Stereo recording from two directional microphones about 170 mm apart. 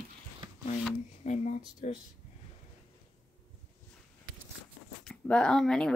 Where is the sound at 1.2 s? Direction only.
45° left (ahead or behind).